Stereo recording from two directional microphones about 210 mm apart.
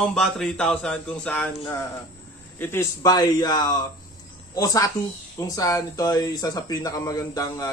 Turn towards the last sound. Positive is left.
turn(degrees=15)  # may be behind; listen again after turning